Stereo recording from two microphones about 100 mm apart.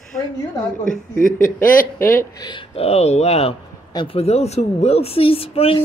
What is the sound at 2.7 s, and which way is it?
Speech, 90° left.